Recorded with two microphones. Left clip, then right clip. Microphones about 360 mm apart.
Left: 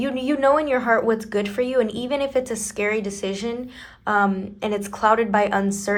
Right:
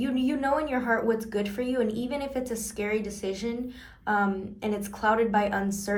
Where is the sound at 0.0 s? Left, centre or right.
Left.